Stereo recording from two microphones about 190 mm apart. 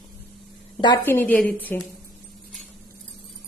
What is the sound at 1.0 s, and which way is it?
Speech, 10° left (ahead or behind).